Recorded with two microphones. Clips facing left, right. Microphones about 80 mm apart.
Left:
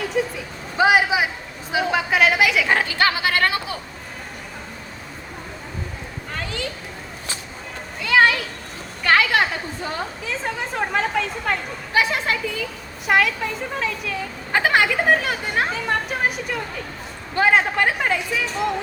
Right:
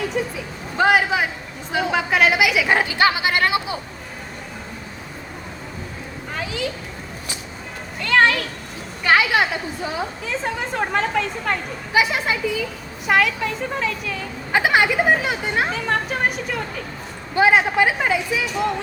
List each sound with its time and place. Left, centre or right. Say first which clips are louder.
0.0 s a woman's voice: left 1 dB; centre
2.7 s speech: right 2 dB; centre
6.3 s a child's voice: right 3 dB; centre
8.0 s speech: even; centre
9.0 s a woman's voice: right 1 dB; centre